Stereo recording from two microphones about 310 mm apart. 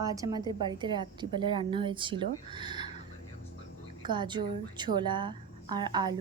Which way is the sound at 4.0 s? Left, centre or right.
Centre.